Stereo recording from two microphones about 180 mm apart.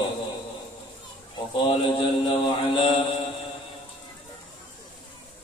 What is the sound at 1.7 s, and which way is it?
Mantra, 30° left (ahead or behind).